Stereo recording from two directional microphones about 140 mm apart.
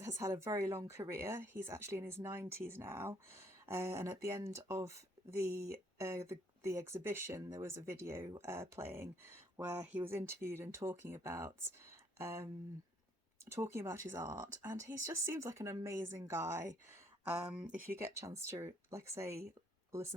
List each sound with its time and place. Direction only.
0.0 s speech: 20° right (ahead or behind)
17.8 s speech: 20° right (ahead or behind)